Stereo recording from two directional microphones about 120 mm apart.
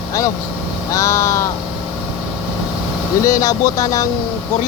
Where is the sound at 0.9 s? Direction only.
25° left (ahead or behind).